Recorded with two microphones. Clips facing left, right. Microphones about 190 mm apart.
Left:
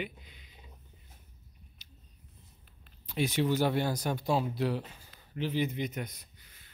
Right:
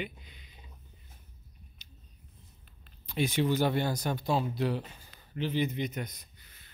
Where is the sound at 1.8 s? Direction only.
5° left (ahead or behind).